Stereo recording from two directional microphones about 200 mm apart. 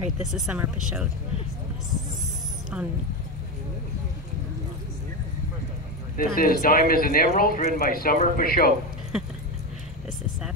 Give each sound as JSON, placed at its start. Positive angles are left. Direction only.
{"t": 0.2, "sound": "speech", "side_deg": -5}
{"t": 2.7, "sound": "speech", "side_deg": -5}
{"t": 6.1, "sound": "speech", "side_deg": 45}
{"t": 9.1, "sound": "keys jangling", "side_deg": -5}